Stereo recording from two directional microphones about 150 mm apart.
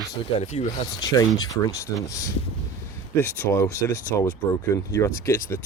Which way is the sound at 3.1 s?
15° left (ahead or behind).